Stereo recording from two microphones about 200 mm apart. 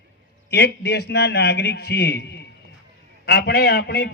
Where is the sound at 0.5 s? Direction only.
55° left (ahead or behind).